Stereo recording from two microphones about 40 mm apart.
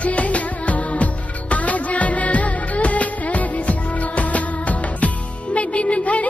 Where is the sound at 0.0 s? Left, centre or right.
Left.